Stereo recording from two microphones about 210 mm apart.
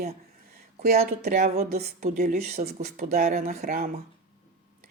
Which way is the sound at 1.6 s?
45° right (ahead or behind).